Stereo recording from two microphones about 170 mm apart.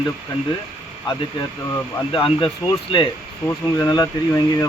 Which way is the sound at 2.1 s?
30° left (ahead or behind).